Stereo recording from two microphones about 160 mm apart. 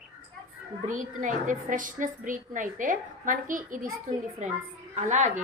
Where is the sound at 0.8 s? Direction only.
55° right (ahead or behind).